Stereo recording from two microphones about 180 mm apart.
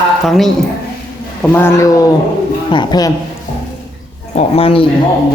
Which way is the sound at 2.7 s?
25° left (ahead or behind).